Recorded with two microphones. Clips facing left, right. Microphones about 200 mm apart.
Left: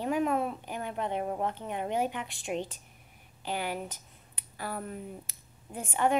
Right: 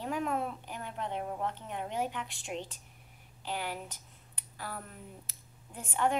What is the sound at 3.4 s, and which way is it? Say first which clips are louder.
Speech: left 4 dB; 55° left (ahead or behind).